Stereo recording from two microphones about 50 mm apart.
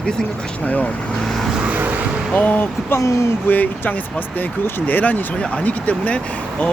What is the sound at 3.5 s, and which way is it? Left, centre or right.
Speech, left.